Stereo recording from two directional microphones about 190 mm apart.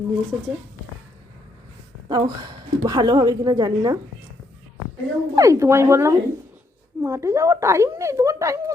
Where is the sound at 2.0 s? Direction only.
20° right (ahead or behind).